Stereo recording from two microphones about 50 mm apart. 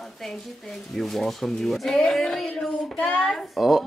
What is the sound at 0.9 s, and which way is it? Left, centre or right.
Speech, centre.